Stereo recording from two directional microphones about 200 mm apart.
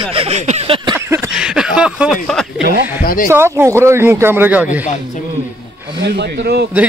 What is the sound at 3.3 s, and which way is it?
Speech, 10° right (ahead or behind).